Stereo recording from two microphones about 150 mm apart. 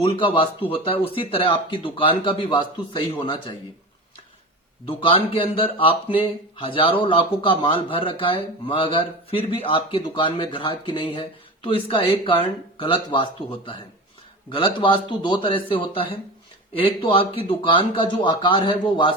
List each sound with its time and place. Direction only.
0.0 s speech: 35° left (ahead or behind)
4.9 s speech: 35° left (ahead or behind)